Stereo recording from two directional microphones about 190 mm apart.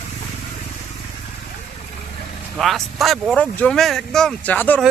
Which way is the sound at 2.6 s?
Centre (ahead or behind).